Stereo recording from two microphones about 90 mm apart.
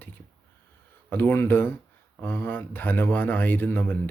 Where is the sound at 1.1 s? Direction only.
25° left (ahead or behind).